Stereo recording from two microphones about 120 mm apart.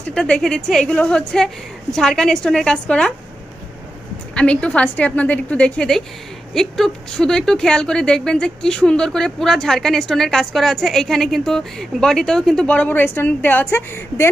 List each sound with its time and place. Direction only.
0.1 s a woman's voice: 5° left (ahead or behind)
4.4 s a woman's voice: 10° left (ahead or behind)